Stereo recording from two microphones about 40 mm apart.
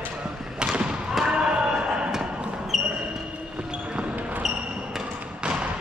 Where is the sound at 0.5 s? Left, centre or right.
Right.